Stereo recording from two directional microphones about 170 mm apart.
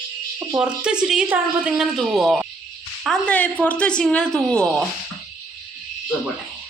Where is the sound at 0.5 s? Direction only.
5° right (ahead or behind).